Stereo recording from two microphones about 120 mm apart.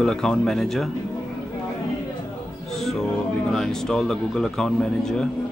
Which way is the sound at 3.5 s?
5° left (ahead or behind).